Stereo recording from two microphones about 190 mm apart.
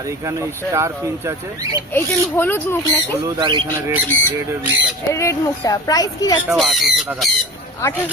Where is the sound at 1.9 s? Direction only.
10° left (ahead or behind).